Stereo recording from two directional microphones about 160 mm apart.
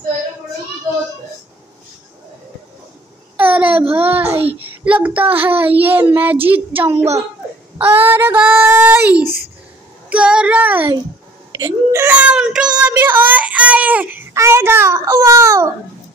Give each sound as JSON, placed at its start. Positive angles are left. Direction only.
{"t": 3.3, "sound": "a sound", "side_deg": -10}
{"t": 3.9, "sound": "a child's voice", "side_deg": -10}
{"t": 4.4, "sound": "child singing", "side_deg": -35}
{"t": 4.8, "sound": "a child's voice", "side_deg": -10}
{"t": 7.7, "sound": "a sound", "side_deg": -15}
{"t": 8.1, "sound": "a child's voice", "side_deg": -15}
{"t": 10.0, "sound": "child singing", "side_deg": -5}
{"t": 11.5, "sound": "a child's voice", "side_deg": -20}